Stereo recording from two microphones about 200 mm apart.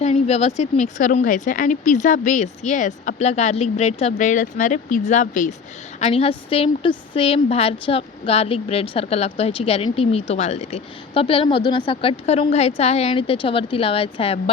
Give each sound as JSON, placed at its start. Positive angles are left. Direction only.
{"t": 0.0, "sound": "a woman's voice", "side_deg": 30}